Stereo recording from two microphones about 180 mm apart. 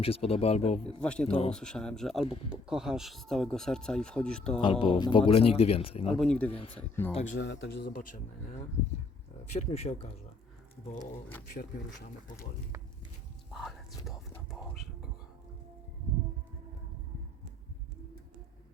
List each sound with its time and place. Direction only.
0.0 s a man's voice: 30° left (ahead or behind)
1.0 s speech: 5° left (ahead or behind)
4.6 s a man's voice: 30° left (ahead or behind)
6.1 s speech: 5° left (ahead or behind)
6.5 s a man's voice: 30° left (ahead or behind)
7.3 s a man's voice: 80° left; by 8.2 s 55° left (ahead or behind)
9.5 s a man's voice: 35° left (ahead or behind)
11.0 s speech: 10° left (ahead or behind)
13.5 s speech: centre (ahead or behind)